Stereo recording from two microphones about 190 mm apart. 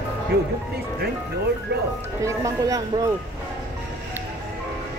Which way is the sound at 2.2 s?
15° right (ahead or behind).